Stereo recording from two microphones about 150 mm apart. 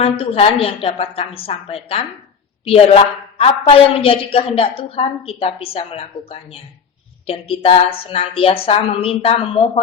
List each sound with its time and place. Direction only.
0.0 s a woman's voice: 40° left (ahead or behind)